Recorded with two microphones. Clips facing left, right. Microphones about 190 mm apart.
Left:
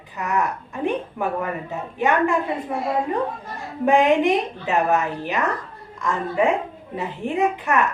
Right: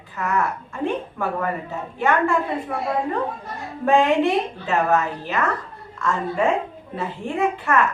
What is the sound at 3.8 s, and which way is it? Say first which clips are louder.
A woman's voice: left 1 dB; 15° left (ahead or behind).